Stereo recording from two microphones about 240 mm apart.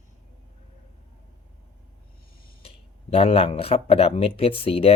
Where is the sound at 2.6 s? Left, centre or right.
Left.